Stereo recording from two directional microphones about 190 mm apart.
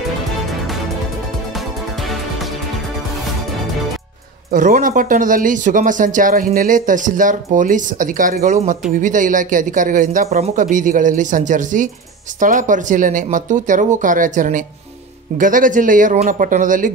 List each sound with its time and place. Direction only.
4.5 s speech: 45° right (ahead or behind)